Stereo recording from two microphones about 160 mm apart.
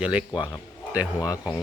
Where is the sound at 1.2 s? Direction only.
25° left (ahead or behind).